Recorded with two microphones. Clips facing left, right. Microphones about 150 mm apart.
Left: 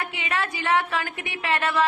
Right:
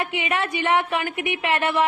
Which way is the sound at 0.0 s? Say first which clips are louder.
Right 4 dB; 25° right (ahead or behind).